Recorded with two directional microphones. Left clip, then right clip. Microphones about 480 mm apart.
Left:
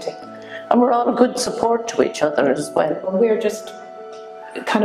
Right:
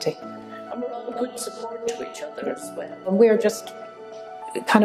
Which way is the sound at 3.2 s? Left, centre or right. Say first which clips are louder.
Right 1 dB; right.